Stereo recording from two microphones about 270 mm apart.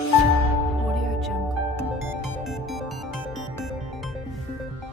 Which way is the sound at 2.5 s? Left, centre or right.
Centre.